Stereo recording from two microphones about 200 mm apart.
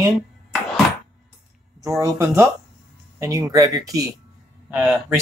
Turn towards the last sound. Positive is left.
turn(degrees=-10)  # may be behind; listen again after turning